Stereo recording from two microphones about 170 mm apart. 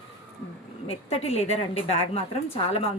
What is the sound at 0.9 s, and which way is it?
Speech, 35° left (ahead or behind).